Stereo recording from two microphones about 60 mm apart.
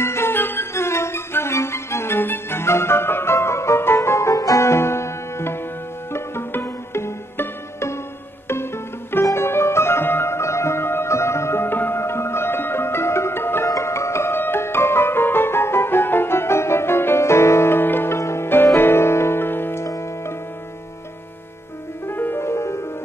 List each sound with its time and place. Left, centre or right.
0.0 s music: left
4.4 s music: left
4.6 s music: left
13.7 s music: left
18.1 s music: left
19.9 s music: left
22.0 s music: left